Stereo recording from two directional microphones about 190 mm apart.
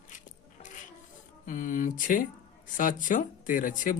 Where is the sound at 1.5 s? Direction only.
45° left (ahead or behind).